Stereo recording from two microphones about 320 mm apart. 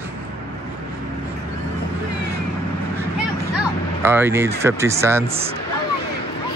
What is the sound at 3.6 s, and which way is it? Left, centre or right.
Speech, centre.